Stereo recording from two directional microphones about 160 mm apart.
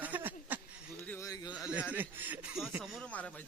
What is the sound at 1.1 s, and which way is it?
Speech, 20° left (ahead or behind).